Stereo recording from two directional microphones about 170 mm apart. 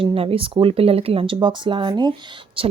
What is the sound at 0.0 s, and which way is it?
Speech, 35° right (ahead or behind).